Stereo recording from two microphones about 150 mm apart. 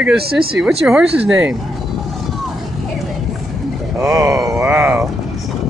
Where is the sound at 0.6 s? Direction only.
5° right (ahead or behind).